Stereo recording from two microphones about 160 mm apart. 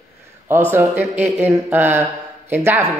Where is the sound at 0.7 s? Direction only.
10° right (ahead or behind).